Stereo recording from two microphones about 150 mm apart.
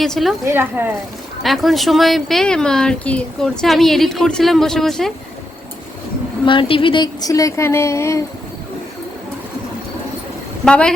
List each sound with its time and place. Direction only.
0.0 s speech: centre (ahead or behind)
0.4 s speech: 15° right (ahead or behind)
1.4 s speech: centre (ahead or behind)
6.4 s speech: 35° left (ahead or behind); by 8.2 s 20° left (ahead or behind)
10.7 s speech: 5° left (ahead or behind)